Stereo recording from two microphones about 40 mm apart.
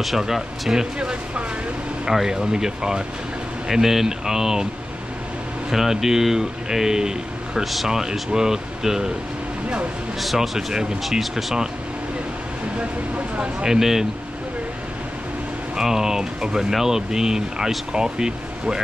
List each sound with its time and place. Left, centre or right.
0.2 s speech: centre
0.9 s speech: right
2.0 s speech: centre
3.6 s speech: centre
5.7 s speech: centre
7.6 s speech: centre
7.9 s speech: centre
10.2 s speech: centre
12.7 s speech: right
13.7 s speech: centre
15.7 s speech: centre